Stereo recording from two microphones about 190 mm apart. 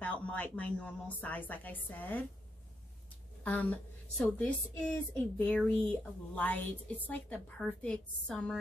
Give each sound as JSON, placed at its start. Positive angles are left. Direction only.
{"t": 0.0, "sound": "a woman's voice", "side_deg": 5}
{"t": 3.4, "sound": "a woman's voice", "side_deg": 10}